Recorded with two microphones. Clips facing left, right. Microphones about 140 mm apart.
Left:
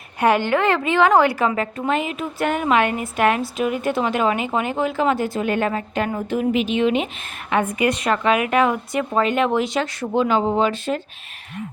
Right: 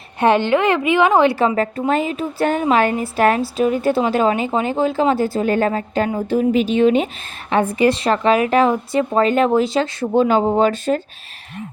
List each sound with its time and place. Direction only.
0.2 s a woman's voice: 25° right (ahead or behind)
1.5 s a woman's voice: 35° right (ahead or behind)
10.2 s a woman's voice: 40° right (ahead or behind)